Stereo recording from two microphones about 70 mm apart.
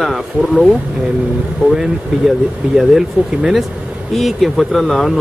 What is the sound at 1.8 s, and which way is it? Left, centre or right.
Speech, centre.